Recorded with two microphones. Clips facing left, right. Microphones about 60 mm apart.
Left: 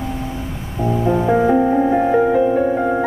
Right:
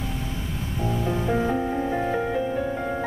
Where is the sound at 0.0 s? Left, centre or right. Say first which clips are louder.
Left 7 dB; centre.